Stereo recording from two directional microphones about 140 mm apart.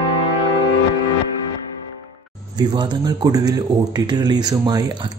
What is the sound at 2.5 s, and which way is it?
A man's voice, 30° right (ahead or behind).